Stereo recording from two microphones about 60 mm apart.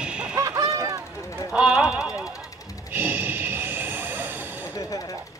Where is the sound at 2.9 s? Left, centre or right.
Right.